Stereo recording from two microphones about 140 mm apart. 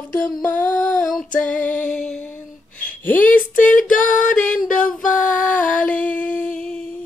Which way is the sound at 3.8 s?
70° left (ahead or behind).